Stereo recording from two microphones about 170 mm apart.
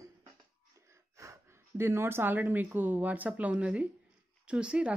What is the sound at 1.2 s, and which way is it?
Speech, 15° right (ahead or behind).